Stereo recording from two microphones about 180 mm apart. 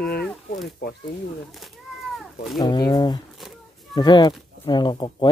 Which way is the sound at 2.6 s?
25° left (ahead or behind).